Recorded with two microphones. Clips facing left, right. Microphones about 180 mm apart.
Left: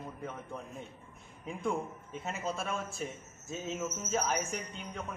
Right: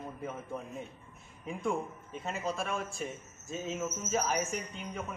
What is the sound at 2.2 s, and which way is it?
Speech, centre (ahead or behind).